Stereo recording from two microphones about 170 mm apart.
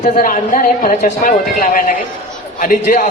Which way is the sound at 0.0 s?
55° left (ahead or behind).